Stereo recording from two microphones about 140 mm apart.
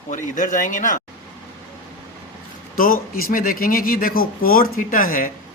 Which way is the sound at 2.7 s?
90° left.